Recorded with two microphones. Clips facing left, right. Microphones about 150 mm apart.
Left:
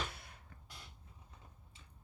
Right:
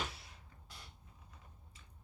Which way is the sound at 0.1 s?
55° left (ahead or behind).